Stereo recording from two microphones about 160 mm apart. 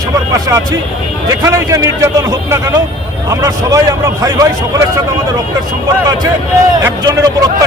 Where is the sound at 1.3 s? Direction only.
20° right (ahead or behind).